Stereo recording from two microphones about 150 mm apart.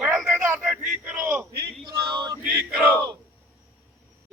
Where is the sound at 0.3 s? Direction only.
15° right (ahead or behind).